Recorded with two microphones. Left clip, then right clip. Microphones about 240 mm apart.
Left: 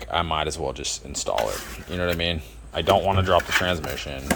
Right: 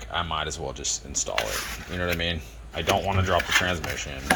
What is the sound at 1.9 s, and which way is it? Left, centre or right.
Speech, centre.